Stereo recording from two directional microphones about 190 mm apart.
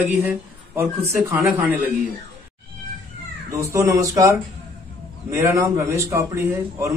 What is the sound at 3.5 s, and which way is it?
A man's voice, 15° right (ahead or behind).